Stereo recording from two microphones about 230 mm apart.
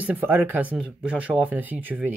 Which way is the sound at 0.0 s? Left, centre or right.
Centre.